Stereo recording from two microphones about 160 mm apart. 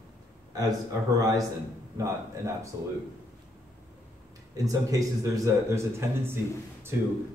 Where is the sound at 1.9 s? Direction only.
20° right (ahead or behind).